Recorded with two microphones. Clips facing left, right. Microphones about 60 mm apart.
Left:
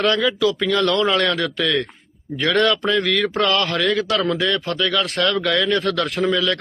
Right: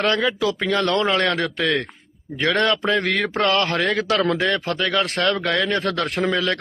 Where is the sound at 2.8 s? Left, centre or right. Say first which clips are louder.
Left 1 dB; right.